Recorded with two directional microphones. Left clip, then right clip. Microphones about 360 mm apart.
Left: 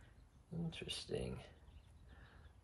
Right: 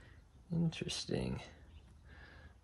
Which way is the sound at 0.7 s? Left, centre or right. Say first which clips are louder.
Right 2 dB; right.